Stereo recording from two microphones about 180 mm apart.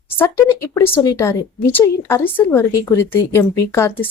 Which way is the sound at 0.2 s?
15° left (ahead or behind).